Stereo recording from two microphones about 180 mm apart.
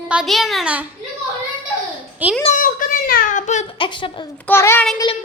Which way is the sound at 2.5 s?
50° left (ahead or behind).